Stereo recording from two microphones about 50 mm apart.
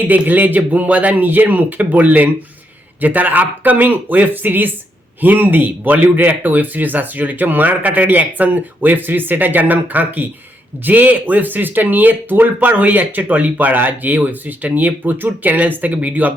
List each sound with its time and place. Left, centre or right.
0.1 s speech: right